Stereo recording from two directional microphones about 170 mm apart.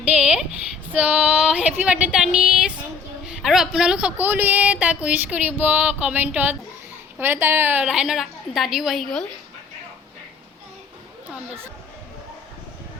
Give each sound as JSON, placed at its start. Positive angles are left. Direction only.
{"t": 0.2, "sound": "a sound", "side_deg": -5}
{"t": 0.9, "sound": "female singing", "side_deg": -5}
{"t": 1.8, "sound": "a woman's voice", "side_deg": -5}